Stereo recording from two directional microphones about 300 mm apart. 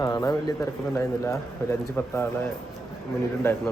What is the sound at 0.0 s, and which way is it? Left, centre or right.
A man's voice, centre.